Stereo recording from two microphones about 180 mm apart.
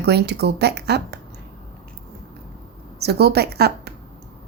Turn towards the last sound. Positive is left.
turn(degrees=-60)  # may be behind; listen again after turning